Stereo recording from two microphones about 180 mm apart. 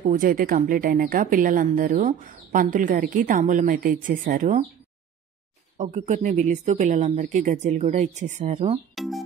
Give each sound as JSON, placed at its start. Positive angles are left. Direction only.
{"t": 0.0, "sound": "a woman's voice", "side_deg": -50}
{"t": 5.8, "sound": "speech", "side_deg": -45}
{"t": 8.9, "sound": "speech", "side_deg": 0}